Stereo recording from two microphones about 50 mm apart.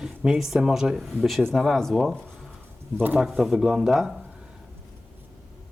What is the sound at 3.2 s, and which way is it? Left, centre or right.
Speech, centre.